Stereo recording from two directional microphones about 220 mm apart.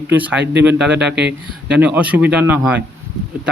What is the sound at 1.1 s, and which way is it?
Speech, 50° right (ahead or behind).